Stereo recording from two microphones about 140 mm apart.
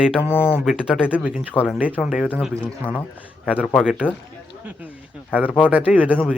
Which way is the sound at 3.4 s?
5° right (ahead or behind).